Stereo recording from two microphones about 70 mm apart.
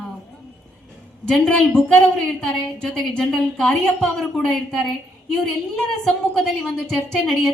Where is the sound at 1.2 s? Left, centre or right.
Centre.